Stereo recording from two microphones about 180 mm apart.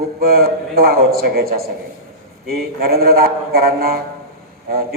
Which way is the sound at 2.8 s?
55° right (ahead or behind).